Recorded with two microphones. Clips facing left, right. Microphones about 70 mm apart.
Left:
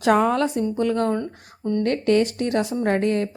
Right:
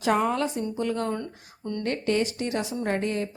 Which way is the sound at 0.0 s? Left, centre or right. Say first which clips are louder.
Left 5 dB; left.